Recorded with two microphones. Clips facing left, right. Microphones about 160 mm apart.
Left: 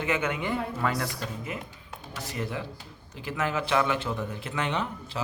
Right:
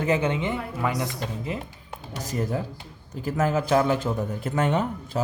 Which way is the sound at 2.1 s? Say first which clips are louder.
Right 6 dB; 40° right (ahead or behind).